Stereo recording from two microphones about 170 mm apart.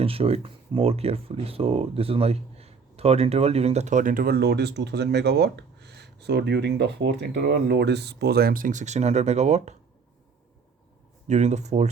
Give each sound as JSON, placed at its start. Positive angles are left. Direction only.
{"t": 0.0, "sound": "speech", "side_deg": -35}
{"t": 11.3, "sound": "speech", "side_deg": -45}